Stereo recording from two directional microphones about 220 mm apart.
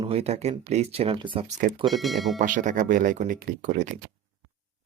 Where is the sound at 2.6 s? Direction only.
35° right (ahead or behind).